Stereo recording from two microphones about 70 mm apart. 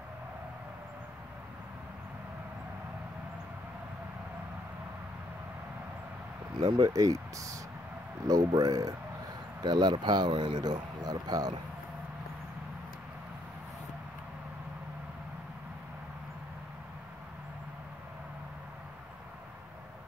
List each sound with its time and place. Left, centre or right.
6.6 s speech: right
8.3 s speech: right
9.6 s speech: right